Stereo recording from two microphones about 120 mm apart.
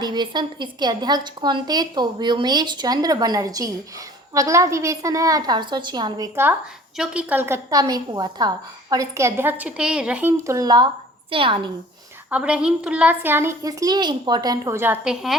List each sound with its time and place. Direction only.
0.0 s a woman's voice: 40° right (ahead or behind)
6.9 s a woman's voice: 5° right (ahead or behind)
10.4 s a woman's voice: 30° right (ahead or behind)
11.3 s a woman's voice: 45° right (ahead or behind)
12.3 s a woman's voice: 10° right (ahead or behind)
15.0 s a woman's voice: centre (ahead or behind)